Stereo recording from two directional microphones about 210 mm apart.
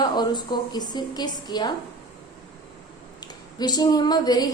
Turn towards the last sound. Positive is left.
turn(degrees=20)  # may be behind; listen again after turning